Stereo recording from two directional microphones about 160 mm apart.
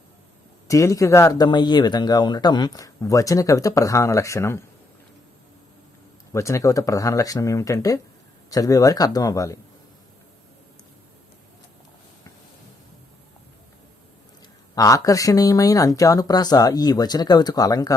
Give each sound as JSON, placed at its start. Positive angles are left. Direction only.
{"t": 0.7, "sound": "speech", "side_deg": 20}
{"t": 6.3, "sound": "speech", "side_deg": 20}
{"t": 14.8, "sound": "speech", "side_deg": 20}